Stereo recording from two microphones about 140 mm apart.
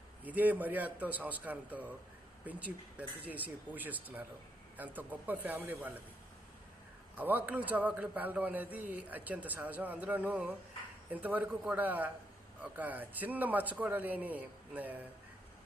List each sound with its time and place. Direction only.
0.3 s a man's voice: 10° right (ahead or behind)
7.2 s a man's voice: 15° right (ahead or behind)